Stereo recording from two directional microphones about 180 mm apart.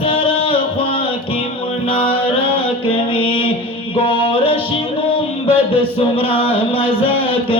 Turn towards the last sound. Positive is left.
turn(degrees=30)  # may be behind; listen again after turning